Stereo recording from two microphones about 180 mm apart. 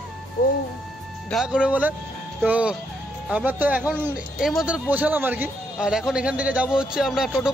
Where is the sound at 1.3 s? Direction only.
5° right (ahead or behind).